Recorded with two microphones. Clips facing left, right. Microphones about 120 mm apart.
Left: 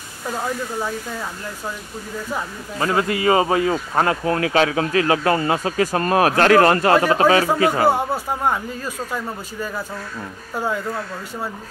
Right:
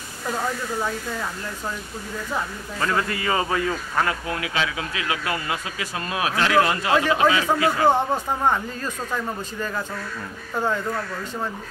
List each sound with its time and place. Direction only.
3.0 s speech: 20° left (ahead or behind)
7.8 s speech: 10° left (ahead or behind)